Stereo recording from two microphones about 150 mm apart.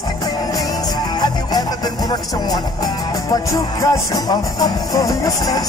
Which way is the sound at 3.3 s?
25° left (ahead or behind).